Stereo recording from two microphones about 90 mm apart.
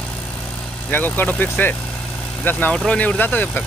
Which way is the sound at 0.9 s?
20° left (ahead or behind).